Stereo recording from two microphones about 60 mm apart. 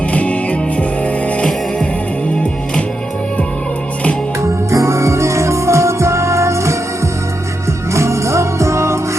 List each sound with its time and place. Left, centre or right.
0.1 s music: left
4.7 s music: right
7.9 s music: right